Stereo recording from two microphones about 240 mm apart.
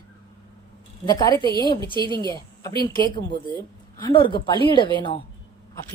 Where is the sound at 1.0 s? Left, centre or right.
Centre.